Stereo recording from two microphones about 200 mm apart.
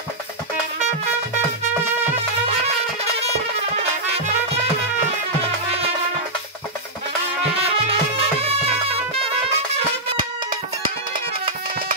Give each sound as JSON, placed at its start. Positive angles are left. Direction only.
{"t": 7.5, "sound": "music", "side_deg": -30}